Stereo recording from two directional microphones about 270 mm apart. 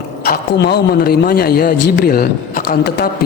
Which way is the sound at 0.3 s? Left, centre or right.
Left.